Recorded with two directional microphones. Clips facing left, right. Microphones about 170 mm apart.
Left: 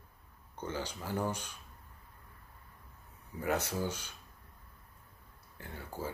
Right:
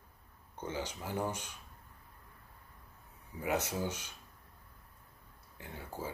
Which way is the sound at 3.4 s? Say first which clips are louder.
Left 1 dB; 20° right (ahead or behind).